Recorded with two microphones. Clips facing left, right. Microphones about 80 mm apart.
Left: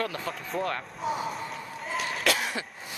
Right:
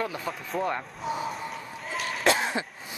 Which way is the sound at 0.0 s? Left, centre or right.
Centre.